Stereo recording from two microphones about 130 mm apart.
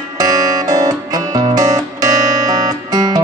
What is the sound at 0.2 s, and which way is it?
Music, 30° right (ahead or behind).